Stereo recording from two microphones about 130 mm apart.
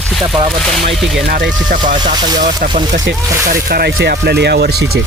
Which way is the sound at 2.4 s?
90° right.